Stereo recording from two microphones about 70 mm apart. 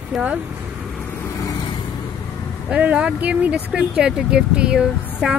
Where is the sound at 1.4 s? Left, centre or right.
Left.